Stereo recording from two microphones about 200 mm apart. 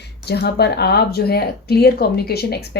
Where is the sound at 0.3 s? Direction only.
55° left (ahead or behind).